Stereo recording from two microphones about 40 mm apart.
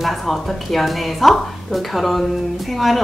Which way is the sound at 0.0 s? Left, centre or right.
Centre.